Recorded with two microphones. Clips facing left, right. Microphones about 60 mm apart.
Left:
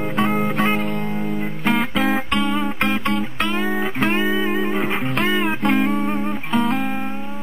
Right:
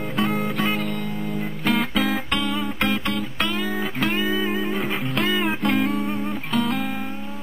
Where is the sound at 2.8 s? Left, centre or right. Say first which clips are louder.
Left 1 dB; left.